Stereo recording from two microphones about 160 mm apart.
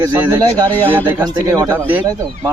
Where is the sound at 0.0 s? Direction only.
15° right (ahead or behind).